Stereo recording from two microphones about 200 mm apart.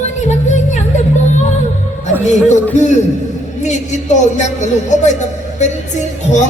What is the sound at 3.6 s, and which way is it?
A woman's voice, 35° left (ahead or behind).